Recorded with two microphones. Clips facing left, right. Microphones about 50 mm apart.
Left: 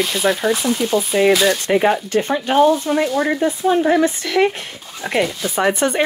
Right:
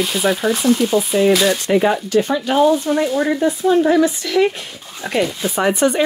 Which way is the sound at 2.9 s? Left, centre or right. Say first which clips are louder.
Even; left.